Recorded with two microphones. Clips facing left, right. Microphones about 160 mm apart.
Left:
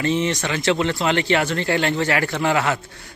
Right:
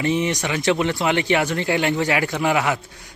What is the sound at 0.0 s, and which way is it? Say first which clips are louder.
Speech: even; 15° right (ahead or behind).